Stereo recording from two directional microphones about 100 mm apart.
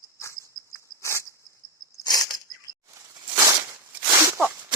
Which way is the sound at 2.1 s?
40° left (ahead or behind).